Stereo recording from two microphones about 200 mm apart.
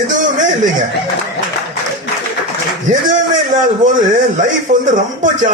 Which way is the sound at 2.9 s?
40° right (ahead or behind).